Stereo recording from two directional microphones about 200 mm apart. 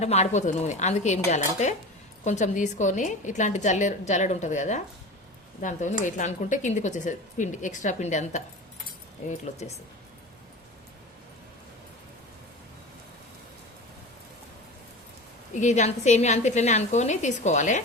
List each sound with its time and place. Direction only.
0.0 s speech: 35° left (ahead or behind)
15.5 s speech: 35° left (ahead or behind)